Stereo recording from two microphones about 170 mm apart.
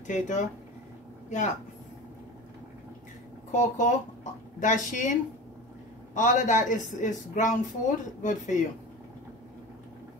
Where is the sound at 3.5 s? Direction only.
45° left (ahead or behind).